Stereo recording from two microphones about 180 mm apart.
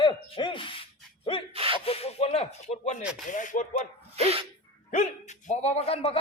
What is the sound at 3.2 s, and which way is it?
Rapping, 45° left (ahead or behind).